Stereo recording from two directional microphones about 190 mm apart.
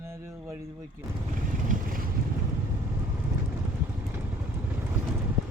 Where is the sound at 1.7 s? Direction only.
45° right (ahead or behind).